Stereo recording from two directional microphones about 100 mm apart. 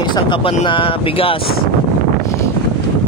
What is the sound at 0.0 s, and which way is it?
Speech, 50° left (ahead or behind).